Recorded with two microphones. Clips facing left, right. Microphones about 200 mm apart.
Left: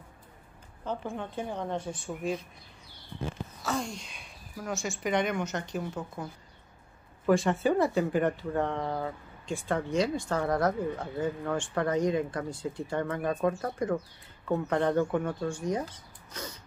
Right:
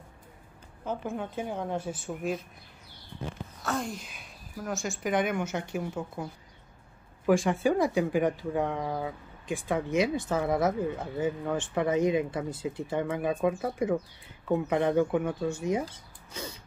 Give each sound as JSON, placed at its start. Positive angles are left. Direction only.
{"t": 0.8, "sound": "a woman's voice", "side_deg": -5}
{"t": 3.6, "sound": "a woman's voice", "side_deg": 0}
{"t": 7.2, "sound": "a woman's voice", "side_deg": -5}
{"t": 10.1, "sound": "a woman's voice", "side_deg": -5}